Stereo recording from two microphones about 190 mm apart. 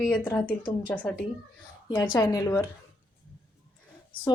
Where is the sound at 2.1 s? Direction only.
20° left (ahead or behind).